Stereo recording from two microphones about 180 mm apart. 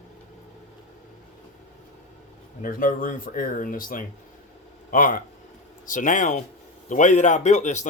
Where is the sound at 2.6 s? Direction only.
50° left (ahead or behind).